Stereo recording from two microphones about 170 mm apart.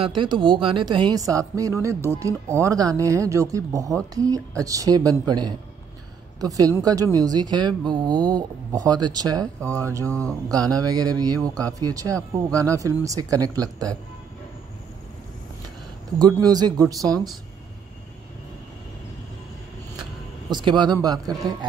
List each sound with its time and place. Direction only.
0.0 s a woman's voice: 30° right (ahead or behind)
10.0 s speech: 10° left (ahead or behind)
10.5 s a woman's voice: 20° right (ahead or behind)
16.2 s a woman's voice: 20° right (ahead or behind)
20.0 s speech: 25° right (ahead or behind)